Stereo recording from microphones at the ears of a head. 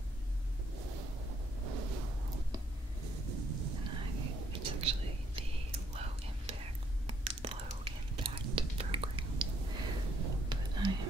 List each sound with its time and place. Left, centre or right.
0.7 s a sound: right
3.0 s whispering: right
8.2 s whispering: right